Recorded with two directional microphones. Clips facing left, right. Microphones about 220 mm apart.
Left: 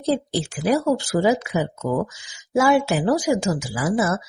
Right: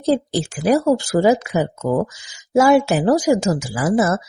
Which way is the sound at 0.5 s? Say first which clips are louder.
Right 4 dB; 45° right (ahead or behind).